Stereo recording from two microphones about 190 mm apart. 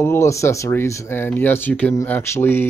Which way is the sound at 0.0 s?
15° left (ahead or behind).